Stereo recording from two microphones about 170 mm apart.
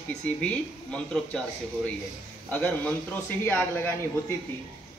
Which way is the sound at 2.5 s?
10° left (ahead or behind).